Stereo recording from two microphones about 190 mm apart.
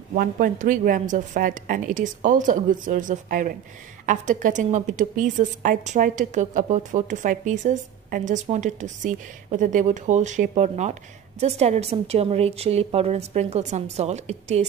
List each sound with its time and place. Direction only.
0.1 s a woman's voice: 45° right (ahead or behind)